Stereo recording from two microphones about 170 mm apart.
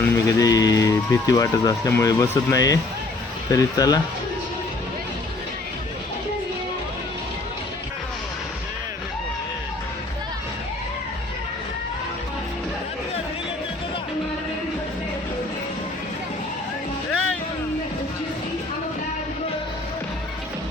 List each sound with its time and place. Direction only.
0.0 s speech: 20° left (ahead or behind)